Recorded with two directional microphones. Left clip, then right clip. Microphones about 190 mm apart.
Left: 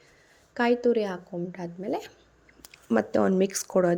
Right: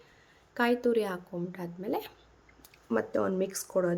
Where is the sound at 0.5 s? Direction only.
15° left (ahead or behind).